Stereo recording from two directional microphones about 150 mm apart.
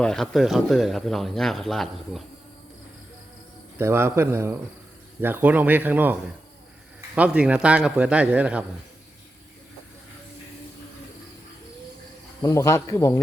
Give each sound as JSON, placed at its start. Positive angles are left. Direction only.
{"t": 0.0, "sound": "speech", "side_deg": 5}
{"t": 3.8, "sound": "speech", "side_deg": -15}
{"t": 7.2, "sound": "speech", "side_deg": -10}
{"t": 12.4, "sound": "speech", "side_deg": 20}